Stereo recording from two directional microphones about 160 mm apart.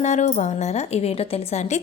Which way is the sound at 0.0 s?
45° left (ahead or behind).